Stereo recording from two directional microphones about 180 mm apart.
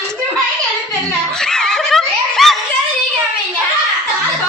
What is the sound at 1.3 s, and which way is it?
Snicker, 5° left (ahead or behind).